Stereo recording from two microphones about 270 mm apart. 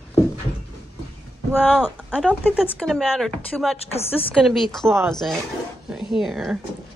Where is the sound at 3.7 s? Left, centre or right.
Left.